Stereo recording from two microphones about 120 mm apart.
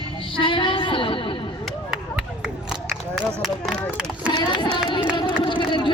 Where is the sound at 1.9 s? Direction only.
5° right (ahead or behind).